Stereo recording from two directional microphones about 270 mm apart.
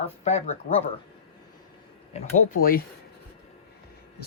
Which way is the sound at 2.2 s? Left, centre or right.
Left.